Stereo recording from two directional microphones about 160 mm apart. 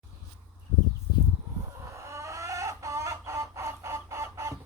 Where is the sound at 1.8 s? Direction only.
20° right (ahead or behind).